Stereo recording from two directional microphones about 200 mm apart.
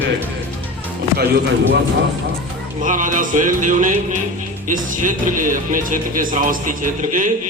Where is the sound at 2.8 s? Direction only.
40° right (ahead or behind).